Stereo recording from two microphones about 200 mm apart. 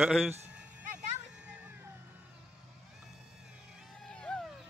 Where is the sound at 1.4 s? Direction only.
10° right (ahead or behind).